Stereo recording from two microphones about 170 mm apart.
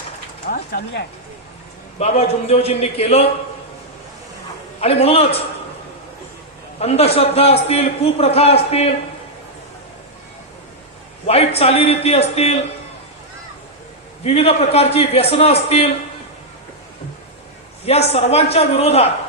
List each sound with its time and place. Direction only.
0.5 s speech: 70° left (ahead or behind)
2.0 s a man's voice: 40° left (ahead or behind)
4.8 s a man's voice: 35° left (ahead or behind)
6.7 s a man's voice: 35° left (ahead or behind)
11.3 s a man's voice: 35° left (ahead or behind)
14.3 s a man's voice: 35° left (ahead or behind)
17.8 s a man's voice: 35° left (ahead or behind)